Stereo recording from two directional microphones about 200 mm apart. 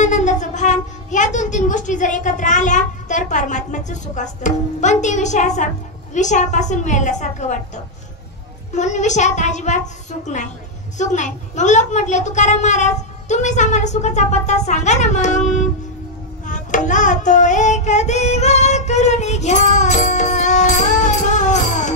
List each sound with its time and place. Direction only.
0.0 s a woman's voice: 35° left (ahead or behind)
16.4 s music: 40° left (ahead or behind)